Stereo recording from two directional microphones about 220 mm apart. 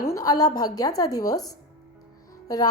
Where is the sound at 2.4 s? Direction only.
15° left (ahead or behind).